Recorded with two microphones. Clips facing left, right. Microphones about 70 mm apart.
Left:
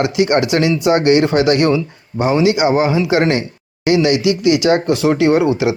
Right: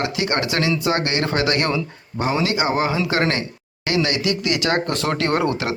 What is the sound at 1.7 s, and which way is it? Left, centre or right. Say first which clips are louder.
Speech: left 6 dB; left.